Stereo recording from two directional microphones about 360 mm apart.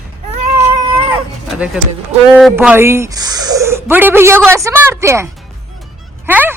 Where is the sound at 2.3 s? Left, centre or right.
Centre.